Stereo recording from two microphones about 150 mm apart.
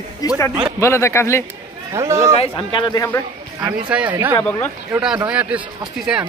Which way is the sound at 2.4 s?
35° left (ahead or behind).